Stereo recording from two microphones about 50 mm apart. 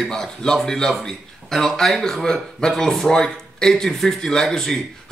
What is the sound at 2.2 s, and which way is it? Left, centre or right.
A man's voice, centre.